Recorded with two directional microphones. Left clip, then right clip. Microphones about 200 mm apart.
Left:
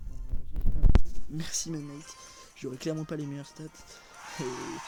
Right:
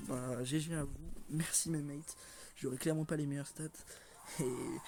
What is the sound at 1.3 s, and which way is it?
Speech, 5° left (ahead or behind).